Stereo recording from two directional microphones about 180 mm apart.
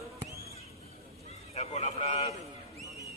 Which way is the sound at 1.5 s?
35° left (ahead or behind).